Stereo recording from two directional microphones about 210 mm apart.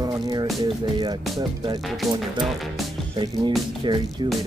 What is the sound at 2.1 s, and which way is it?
Speech, centre (ahead or behind).